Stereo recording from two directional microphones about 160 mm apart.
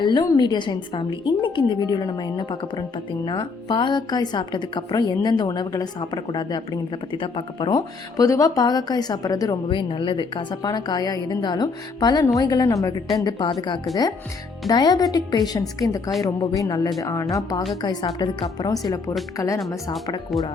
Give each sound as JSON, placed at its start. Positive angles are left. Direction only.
{"t": 0.0, "sound": "a woman's voice", "side_deg": 25}
{"t": 19.5, "sound": "a woman's voice", "side_deg": 0}